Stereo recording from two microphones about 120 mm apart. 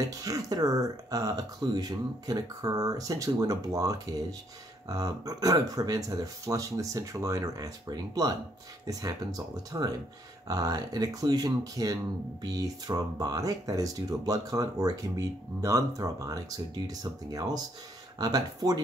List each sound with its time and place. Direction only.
0.0 s speech: 30° right (ahead or behind)
9.7 s speech: 30° right (ahead or behind)